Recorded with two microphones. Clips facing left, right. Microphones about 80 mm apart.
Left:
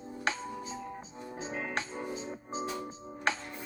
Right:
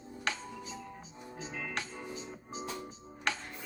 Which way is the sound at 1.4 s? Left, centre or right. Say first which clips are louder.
Left 4 dB; left.